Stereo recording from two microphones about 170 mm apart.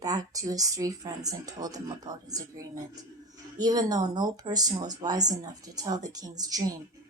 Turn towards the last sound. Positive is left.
turn(degrees=-20)  # may be behind; listen again after turning